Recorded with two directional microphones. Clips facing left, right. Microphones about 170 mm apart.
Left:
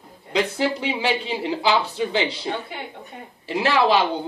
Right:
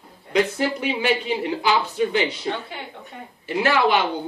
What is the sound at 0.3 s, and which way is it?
Speech, 30° left (ahead or behind).